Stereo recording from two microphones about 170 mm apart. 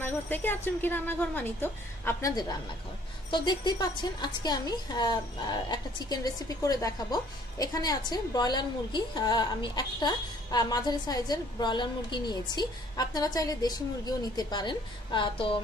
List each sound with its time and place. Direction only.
0.0 s speech: 10° left (ahead or behind)
3.3 s a woman's voice: 25° left (ahead or behind)